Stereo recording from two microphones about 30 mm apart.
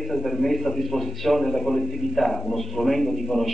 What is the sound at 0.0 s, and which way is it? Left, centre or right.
A man's voice, centre.